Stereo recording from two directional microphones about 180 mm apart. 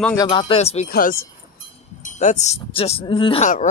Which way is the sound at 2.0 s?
40° left (ahead or behind).